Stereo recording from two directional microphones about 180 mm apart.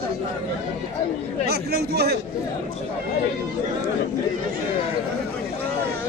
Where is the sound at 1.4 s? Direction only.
60° right (ahead or behind).